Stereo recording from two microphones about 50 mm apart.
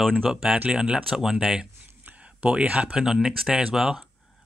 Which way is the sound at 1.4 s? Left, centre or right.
Centre.